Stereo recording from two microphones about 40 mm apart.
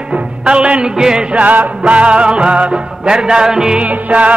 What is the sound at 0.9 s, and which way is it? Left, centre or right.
Music, centre.